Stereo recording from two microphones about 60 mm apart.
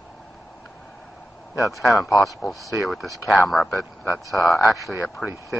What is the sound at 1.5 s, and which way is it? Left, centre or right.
Speech, left.